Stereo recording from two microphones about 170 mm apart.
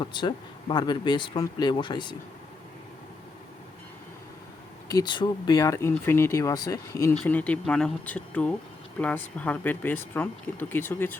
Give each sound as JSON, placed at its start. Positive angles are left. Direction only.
{"t": 0.0, "sound": "speech", "side_deg": 25}
{"t": 4.9, "sound": "speech", "side_deg": 25}